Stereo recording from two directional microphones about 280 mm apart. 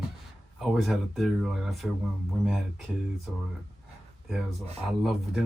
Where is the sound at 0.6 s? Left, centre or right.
Centre.